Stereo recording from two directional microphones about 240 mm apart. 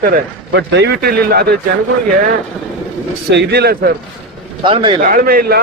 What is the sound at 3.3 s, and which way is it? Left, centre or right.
Speech, right.